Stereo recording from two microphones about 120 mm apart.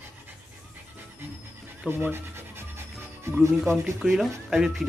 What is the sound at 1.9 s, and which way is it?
Speech, 15° right (ahead or behind).